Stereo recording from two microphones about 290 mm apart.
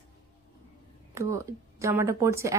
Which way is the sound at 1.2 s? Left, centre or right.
Centre.